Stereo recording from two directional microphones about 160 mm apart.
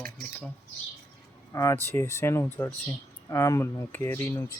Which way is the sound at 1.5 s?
15° left (ahead or behind).